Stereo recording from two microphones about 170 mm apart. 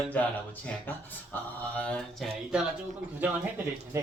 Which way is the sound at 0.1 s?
10° left (ahead or behind).